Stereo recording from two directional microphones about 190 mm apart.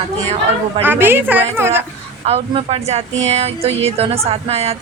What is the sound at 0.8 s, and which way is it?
A woman's voice, 10° right (ahead or behind).